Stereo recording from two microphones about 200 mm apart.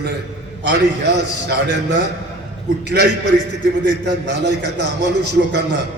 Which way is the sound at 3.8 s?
60° right (ahead or behind).